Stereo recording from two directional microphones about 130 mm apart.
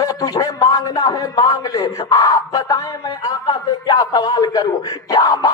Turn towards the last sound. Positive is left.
turn(degrees=30)  # may be behind; listen again after turning